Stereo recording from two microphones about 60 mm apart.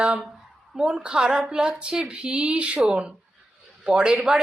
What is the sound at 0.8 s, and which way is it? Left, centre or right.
A woman's voice, centre.